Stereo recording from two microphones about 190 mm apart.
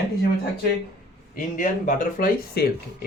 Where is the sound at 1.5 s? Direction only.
40° left (ahead or behind).